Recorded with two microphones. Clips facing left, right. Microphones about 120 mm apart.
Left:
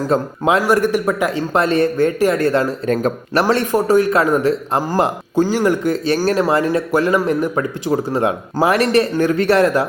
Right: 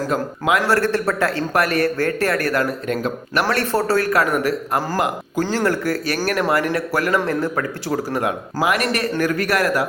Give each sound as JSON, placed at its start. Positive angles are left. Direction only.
{"t": 0.1, "sound": "speech", "side_deg": 30}
{"t": 0.6, "sound": "speech", "side_deg": 15}
{"t": 2.9, "sound": "speech", "side_deg": 40}
{"t": 3.4, "sound": "speech", "side_deg": 15}
{"t": 5.4, "sound": "speech", "side_deg": 15}